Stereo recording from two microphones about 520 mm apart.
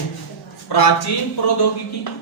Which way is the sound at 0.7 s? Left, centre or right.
Left.